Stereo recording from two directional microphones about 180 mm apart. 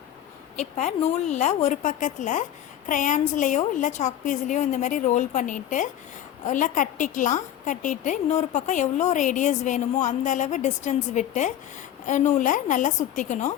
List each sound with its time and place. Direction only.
0.5 s a woman's voice: 40° left (ahead or behind)